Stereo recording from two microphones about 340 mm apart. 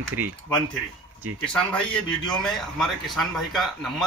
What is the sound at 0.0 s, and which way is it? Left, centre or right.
Speech, right.